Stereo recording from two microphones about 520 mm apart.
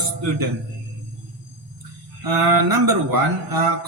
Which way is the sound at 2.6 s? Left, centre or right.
Right.